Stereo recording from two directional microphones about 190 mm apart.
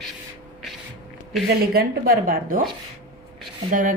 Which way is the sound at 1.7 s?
50° right (ahead or behind).